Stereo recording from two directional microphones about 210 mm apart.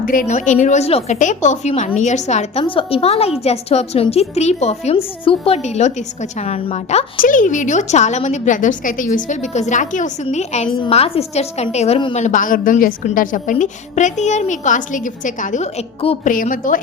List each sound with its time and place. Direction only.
0.0 s a woman's voice: 40° left (ahead or behind)
12.2 s a woman's voice: 40° left (ahead or behind)